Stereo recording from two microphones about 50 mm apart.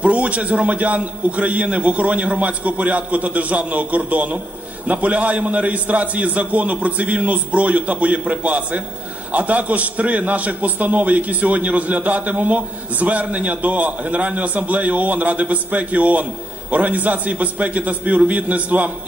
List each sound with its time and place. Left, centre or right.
0.0 s a man's voice: right